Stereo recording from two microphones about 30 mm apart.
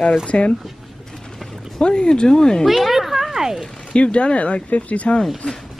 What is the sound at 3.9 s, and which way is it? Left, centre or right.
Speech, left.